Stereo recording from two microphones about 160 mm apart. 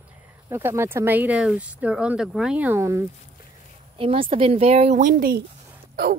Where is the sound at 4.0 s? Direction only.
35° right (ahead or behind).